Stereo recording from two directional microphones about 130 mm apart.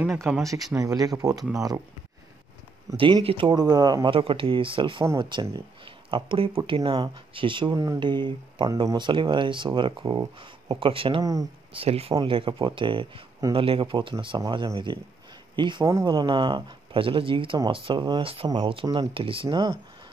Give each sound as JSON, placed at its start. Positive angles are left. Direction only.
{"t": 0.3, "sound": "speech", "side_deg": -5}
{"t": 0.7, "sound": "speech", "side_deg": -25}
{"t": 3.0, "sound": "speech", "side_deg": -40}
{"t": 4.1, "sound": "speech", "side_deg": -40}
{"t": 7.7, "sound": "speech", "side_deg": -25}
{"t": 8.0, "sound": "speech", "side_deg": -35}
{"t": 15.8, "sound": "speech", "side_deg": -25}
{"t": 18.2, "sound": "speech", "side_deg": -45}